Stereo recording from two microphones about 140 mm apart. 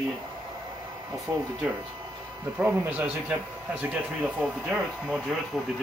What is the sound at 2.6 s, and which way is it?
Speech, 10° right (ahead or behind).